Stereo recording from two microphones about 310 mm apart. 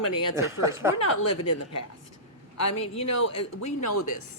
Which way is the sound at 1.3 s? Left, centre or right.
Left.